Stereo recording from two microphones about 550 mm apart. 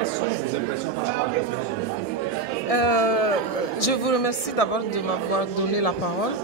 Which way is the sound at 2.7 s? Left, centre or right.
Left.